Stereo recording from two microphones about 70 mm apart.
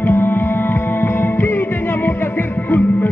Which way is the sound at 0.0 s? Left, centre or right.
Left.